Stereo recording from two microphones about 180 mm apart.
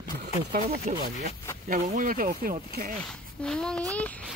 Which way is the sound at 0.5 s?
55° right (ahead or behind).